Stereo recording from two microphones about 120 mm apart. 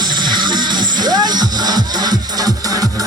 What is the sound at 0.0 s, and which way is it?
Music, 40° right (ahead or behind).